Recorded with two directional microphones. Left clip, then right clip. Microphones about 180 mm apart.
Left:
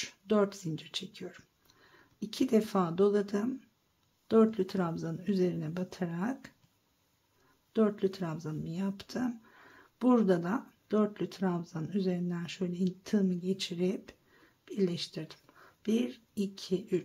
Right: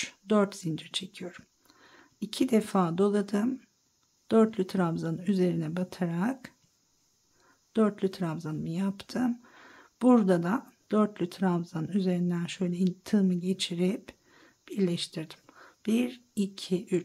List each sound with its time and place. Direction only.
0.0 s a woman's voice: 25° right (ahead or behind)
7.7 s speech: 25° right (ahead or behind)